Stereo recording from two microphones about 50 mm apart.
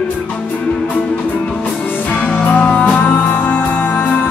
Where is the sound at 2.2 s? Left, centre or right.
Left.